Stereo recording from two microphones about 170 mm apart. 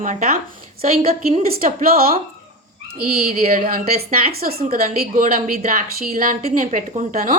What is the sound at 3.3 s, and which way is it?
A woman's voice, 55° right (ahead or behind).